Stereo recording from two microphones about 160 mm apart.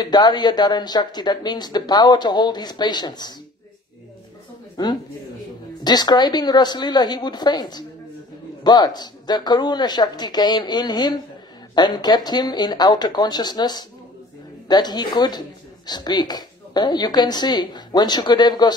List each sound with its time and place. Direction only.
0.0 s speech: 25° left (ahead or behind)
4.8 s speech: 25° left (ahead or behind)